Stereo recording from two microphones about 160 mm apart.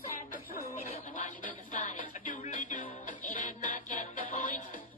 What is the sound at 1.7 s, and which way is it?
Music, 55° left (ahead or behind).